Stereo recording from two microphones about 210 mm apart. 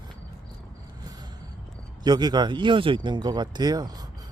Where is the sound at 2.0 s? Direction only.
20° right (ahead or behind).